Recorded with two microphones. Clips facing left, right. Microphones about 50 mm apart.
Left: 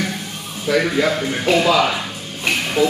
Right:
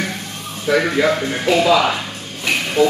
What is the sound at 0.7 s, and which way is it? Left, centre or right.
Speech, centre.